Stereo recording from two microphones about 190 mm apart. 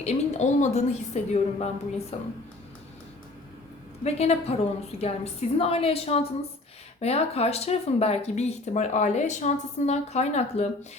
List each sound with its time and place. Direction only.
0.0 s speech: 35° left (ahead or behind)
4.0 s speech: 35° left (ahead or behind)